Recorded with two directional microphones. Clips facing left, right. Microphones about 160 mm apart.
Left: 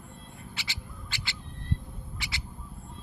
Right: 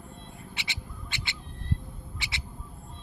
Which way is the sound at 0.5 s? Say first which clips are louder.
Right 1 dB; 20° right (ahead or behind).